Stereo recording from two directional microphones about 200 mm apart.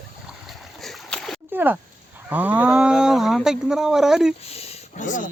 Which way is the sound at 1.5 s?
10° right (ahead or behind).